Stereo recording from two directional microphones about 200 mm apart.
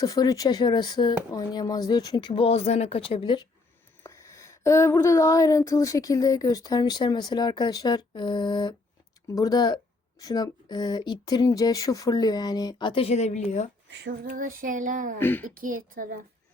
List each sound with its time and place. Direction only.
0.0 s speech: 20° left (ahead or behind); by 13.7 s 35° left (ahead or behind)
14.0 s female singing: 45° right (ahead or behind)
15.2 s speech: 10° left (ahead or behind)
15.4 s a woman's voice: 45° right (ahead or behind)